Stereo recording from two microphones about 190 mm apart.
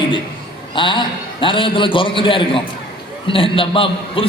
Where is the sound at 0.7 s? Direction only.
25° left (ahead or behind).